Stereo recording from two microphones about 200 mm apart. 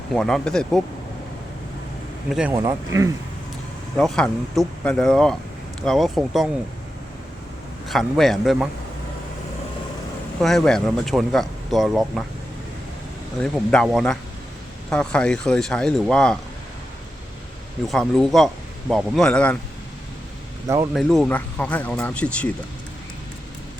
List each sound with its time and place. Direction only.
0.1 s speech: 5° left (ahead or behind)
2.3 s speech: 5° right (ahead or behind)
2.6 s speech: 15° right (ahead or behind)
3.9 s speech: 5° left (ahead or behind)
7.9 s speech: centre (ahead or behind)
10.4 s speech: centre (ahead or behind)
13.4 s speech: 5° left (ahead or behind)
17.8 s speech: centre (ahead or behind)
20.9 s speech: centre (ahead or behind)